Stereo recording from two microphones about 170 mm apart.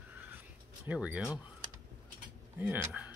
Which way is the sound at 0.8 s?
10° right (ahead or behind).